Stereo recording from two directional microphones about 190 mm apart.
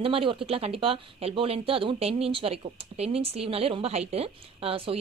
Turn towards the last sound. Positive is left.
turn(degrees=-30)  # may be behind; listen again after turning